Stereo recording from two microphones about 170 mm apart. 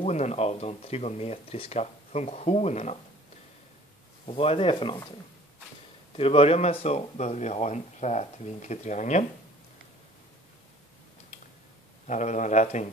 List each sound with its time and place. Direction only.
0.0 s speech: 40° left (ahead or behind)
4.3 s speech: 35° left (ahead or behind)
6.1 s speech: 35° left (ahead or behind)
12.1 s speech: 45° left (ahead or behind)